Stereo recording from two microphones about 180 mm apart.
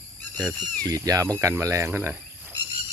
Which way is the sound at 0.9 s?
20° right (ahead or behind).